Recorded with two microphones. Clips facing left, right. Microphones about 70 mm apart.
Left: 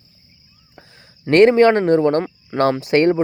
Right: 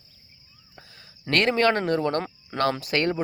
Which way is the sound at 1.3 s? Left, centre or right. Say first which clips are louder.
Left 10 dB; left.